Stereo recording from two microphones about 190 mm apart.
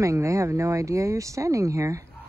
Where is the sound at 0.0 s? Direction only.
15° right (ahead or behind).